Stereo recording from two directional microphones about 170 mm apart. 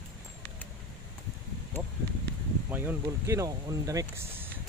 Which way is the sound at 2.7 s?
10° right (ahead or behind).